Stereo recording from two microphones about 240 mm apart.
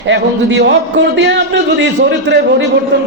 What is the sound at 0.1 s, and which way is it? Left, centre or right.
A man's voice, right.